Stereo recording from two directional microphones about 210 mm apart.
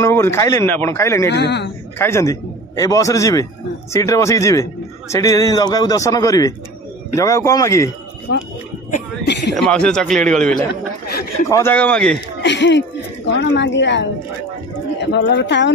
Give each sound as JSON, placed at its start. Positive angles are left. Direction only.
{"t": 0.0, "sound": "a man's voice", "side_deg": 10}
{"t": 1.3, "sound": "speech", "side_deg": 55}
{"t": 2.0, "sound": "a man's voice", "side_deg": 10}
{"t": 8.3, "sound": "speech", "side_deg": 55}
{"t": 9.5, "sound": "a man's voice", "side_deg": 5}
{"t": 11.4, "sound": "a man's voice", "side_deg": 15}
{"t": 12.4, "sound": "speech", "side_deg": 55}